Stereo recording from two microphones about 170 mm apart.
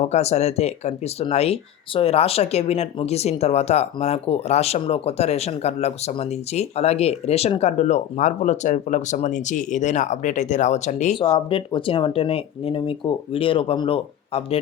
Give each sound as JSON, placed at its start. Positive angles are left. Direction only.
{"t": 0.0, "sound": "speech", "side_deg": 40}
{"t": 11.2, "sound": "speech", "side_deg": 30}